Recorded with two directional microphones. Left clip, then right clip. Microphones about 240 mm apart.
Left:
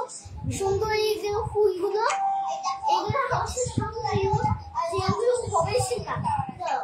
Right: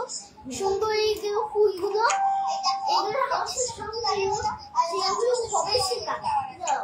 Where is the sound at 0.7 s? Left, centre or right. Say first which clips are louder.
Right 1 dB; centre.